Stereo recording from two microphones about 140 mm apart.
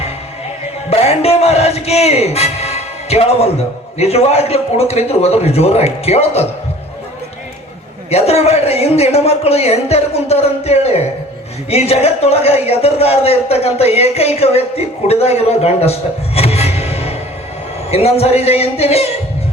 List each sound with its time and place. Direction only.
0.9 s speech: 45° left (ahead or behind)
8.1 s a man's voice: 50° left (ahead or behind)